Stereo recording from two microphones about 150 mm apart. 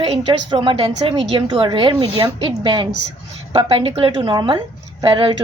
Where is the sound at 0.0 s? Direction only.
35° right (ahead or behind).